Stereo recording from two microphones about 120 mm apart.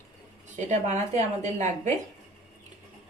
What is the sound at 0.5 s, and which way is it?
Speech, 80° right.